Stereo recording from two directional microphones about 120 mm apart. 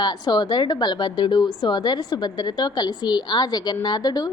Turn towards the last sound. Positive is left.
turn(degrees=35)  # may be behind; listen again after turning